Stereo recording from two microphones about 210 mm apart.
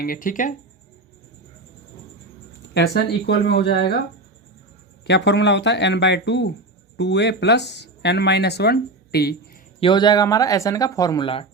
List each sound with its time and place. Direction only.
0.0 s speech: 40° left (ahead or behind)
2.7 s speech: 50° left (ahead or behind)
5.0 s speech: 55° left (ahead or behind)
9.8 s speech: 20° left (ahead or behind)